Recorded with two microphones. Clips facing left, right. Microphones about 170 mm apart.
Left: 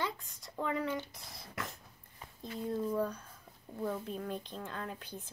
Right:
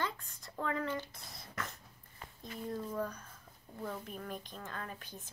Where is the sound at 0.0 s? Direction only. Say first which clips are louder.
Left 1 dB; 15° left (ahead or behind).